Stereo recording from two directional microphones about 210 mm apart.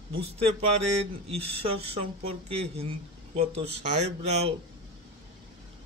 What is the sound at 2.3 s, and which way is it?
Speech, 30° right (ahead or behind).